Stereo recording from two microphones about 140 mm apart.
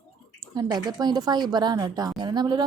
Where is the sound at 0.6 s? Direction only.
30° right (ahead or behind).